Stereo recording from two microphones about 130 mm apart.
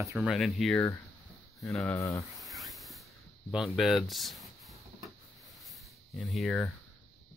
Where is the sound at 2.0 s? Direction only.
25° left (ahead or behind).